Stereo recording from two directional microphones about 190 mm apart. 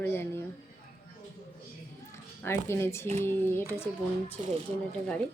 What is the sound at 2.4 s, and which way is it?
A woman's voice, 15° left (ahead or behind).